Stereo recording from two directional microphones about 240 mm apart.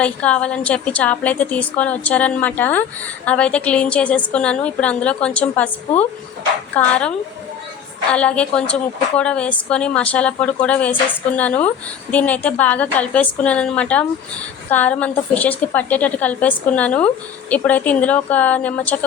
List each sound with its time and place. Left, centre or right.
0.0 s a woman's voice: centre
6.7 s a woman's voice: centre
8.1 s a woman's voice: centre